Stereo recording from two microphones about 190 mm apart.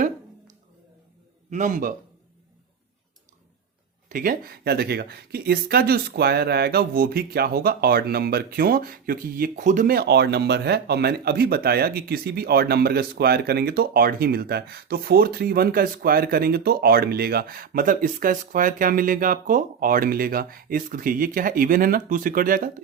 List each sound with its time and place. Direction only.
1.5 s speech: 40° right (ahead or behind)
4.1 s speech: 50° right (ahead or behind)